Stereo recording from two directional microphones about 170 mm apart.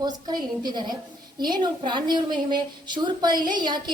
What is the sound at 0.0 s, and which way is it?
A woman's voice, 25° right (ahead or behind).